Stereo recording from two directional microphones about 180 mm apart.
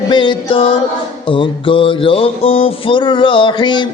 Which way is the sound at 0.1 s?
25° left (ahead or behind).